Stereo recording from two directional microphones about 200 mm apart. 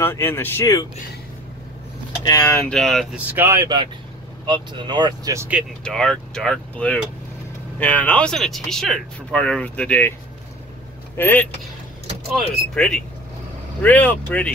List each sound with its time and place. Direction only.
0.0 s speech: 10° left (ahead or behind)
2.2 s speech: 15° left (ahead or behind)
2.7 s speech: centre (ahead or behind)
3.3 s speech: 15° right (ahead or behind)
5.9 s speech: 5° left (ahead or behind)
11.1 s speech: 10° left (ahead or behind)